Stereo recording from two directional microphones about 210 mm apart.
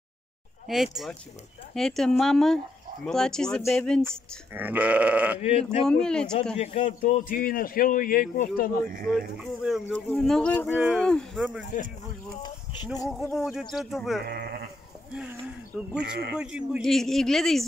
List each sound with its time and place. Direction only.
1.8 s speech: centre (ahead or behind)
4.6 s sheep: 10° right (ahead or behind)
5.4 s speech: 30° left (ahead or behind)
5.9 s speech: 5° left (ahead or behind)
6.5 s a man's voice: 30° left (ahead or behind); by 8.7 s 45° left (ahead or behind)
9.1 s speech: centre (ahead or behind)
13.1 s speech: centre (ahead or behind)
14.2 s speech: 45° right (ahead or behind)
15.1 s speech: 5° right (ahead or behind)